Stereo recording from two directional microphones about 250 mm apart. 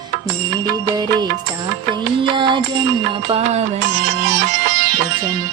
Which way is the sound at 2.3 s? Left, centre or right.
Centre.